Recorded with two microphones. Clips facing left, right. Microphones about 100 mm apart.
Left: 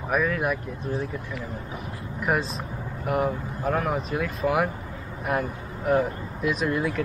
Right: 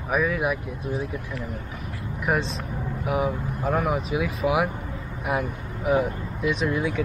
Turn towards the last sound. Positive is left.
turn(degrees=0)  # may be behind; listen again after turning